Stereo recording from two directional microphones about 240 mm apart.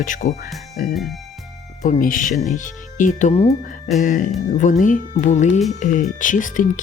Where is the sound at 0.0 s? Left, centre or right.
Left.